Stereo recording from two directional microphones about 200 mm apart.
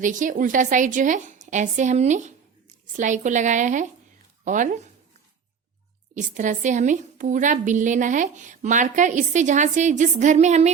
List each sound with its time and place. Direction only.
0.0 s a woman's voice: 40° right (ahead or behind)
6.1 s a woman's voice: 40° right (ahead or behind)